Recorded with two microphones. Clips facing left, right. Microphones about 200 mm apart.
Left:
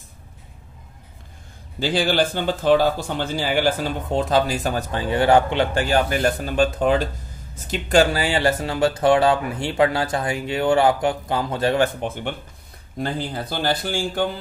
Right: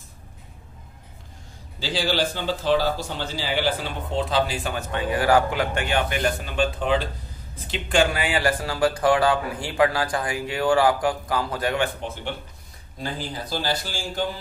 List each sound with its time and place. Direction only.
1.8 s speech: 55° left (ahead or behind); by 11.8 s 25° left (ahead or behind)
11.8 s speech: 55° left (ahead or behind)